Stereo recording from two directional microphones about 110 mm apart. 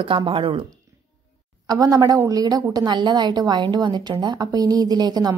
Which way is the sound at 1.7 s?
35° right (ahead or behind).